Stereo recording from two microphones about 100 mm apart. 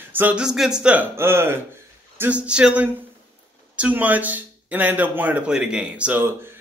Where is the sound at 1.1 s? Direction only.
25° right (ahead or behind).